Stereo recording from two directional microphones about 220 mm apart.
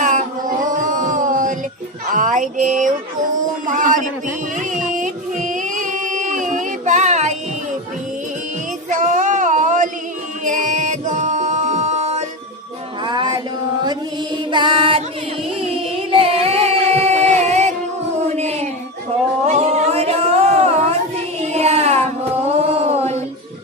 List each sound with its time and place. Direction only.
0.0 s a sound: 35° right (ahead or behind)
3.7 s a man's voice: 35° right (ahead or behind)
4.5 s music: 35° right (ahead or behind)
8.9 s child singing: 35° right (ahead or behind)
10.4 s music: 35° right (ahead or behind)
13.0 s music: 20° right (ahead or behind)
14.5 s music: 20° right (ahead or behind)
18.3 s a sound: 30° right (ahead or behind)